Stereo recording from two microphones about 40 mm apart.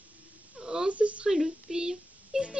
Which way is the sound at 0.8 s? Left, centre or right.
Right.